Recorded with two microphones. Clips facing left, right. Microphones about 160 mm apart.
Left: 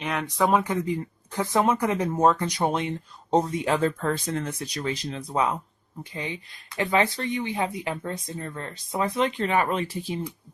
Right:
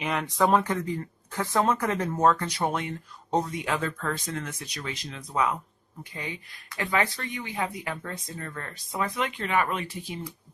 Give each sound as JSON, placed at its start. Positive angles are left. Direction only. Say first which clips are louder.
{"t": 0.0, "sound": "speech", "louder": "even", "side_deg": 0}
{"t": 0.6, "sound": "speech", "louder": "left 3 dB", "side_deg": 10}